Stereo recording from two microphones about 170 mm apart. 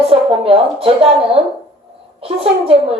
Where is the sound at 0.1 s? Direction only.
35° right (ahead or behind).